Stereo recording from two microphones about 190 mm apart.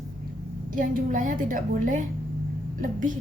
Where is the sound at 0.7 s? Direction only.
45° right (ahead or behind).